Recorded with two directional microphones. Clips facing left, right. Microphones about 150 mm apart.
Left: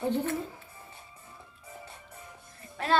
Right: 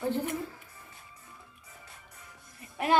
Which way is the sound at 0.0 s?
20° left (ahead or behind).